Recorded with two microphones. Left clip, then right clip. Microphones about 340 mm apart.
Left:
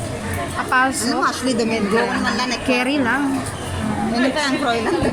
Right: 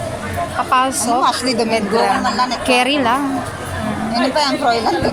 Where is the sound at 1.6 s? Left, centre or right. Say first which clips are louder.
Right 2 dB; right.